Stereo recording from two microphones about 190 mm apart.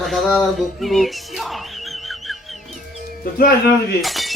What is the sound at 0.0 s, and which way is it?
Music, centre (ahead or behind).